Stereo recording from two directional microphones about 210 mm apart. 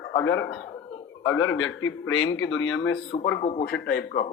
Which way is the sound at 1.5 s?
75° left (ahead or behind).